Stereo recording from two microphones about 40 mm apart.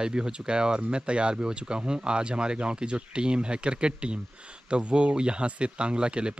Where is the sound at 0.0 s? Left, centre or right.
Right.